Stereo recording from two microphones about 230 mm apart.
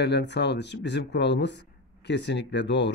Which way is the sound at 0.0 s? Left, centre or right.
Left.